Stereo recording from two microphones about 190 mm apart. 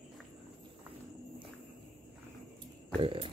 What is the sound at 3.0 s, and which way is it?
Speech, 30° right (ahead or behind).